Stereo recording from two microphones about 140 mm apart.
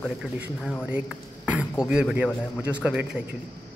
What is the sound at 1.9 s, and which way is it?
Speech, 10° right (ahead or behind).